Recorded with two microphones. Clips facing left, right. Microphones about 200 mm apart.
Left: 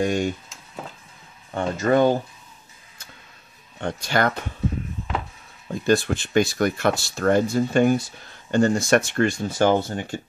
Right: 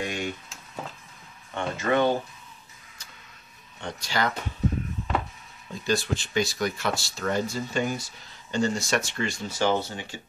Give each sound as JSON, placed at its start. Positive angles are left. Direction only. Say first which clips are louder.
{"t": 0.0, "sound": "a sound", "louder": "left 9 dB", "side_deg": 45}
{"t": 1.5, "sound": "speech", "louder": "left 5 dB", "side_deg": 40}
{"t": 3.8, "sound": "speech", "louder": "left 6 dB", "side_deg": 55}
{"t": 5.9, "sound": "speech", "louder": "left 6 dB", "side_deg": 55}